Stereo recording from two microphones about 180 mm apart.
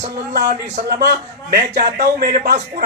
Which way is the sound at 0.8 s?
60° right (ahead or behind).